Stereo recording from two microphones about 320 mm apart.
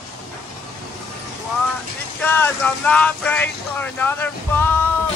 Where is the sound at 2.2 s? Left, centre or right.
Centre.